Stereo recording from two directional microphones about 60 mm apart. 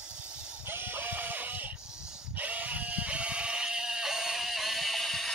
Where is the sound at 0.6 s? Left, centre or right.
Right.